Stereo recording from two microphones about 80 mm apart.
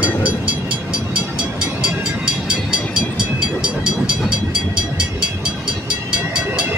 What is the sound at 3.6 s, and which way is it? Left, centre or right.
Train, centre.